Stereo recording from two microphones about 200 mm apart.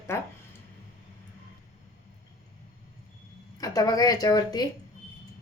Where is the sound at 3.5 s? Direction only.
20° left (ahead or behind).